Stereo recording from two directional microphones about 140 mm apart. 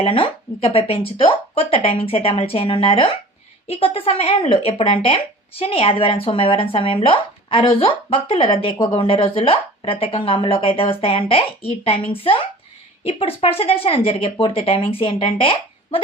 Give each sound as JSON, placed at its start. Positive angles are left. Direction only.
{"t": 0.0, "sound": "speech", "side_deg": 40}